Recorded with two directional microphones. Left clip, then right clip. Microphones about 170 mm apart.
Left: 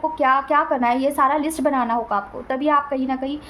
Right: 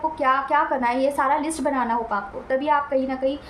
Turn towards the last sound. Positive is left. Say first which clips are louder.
# right 1 dB
turn(degrees=40)  # may be behind; listen again after turning